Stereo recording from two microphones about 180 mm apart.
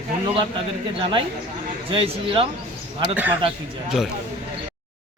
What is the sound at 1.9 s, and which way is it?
Speech, 30° right (ahead or behind).